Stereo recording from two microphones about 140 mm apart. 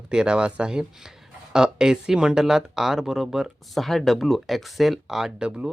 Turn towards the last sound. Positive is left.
turn(degrees=-5)  # may be behind; listen again after turning